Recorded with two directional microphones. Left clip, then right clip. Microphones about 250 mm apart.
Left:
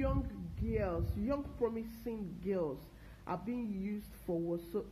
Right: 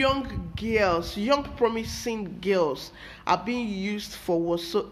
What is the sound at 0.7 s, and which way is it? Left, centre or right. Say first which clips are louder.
Speech: right 14 dB; centre.